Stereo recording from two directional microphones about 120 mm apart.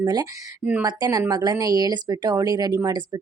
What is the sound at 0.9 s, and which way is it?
Speech, 35° right (ahead or behind).